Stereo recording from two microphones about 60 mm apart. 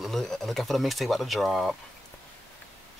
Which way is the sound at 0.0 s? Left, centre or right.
Centre.